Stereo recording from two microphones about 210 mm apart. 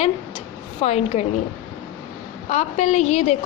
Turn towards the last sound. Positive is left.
turn(degrees=30)  # may be behind; listen again after turning